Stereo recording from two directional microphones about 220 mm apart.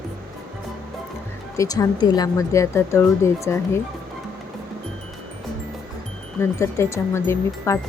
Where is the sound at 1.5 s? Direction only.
15° left (ahead or behind).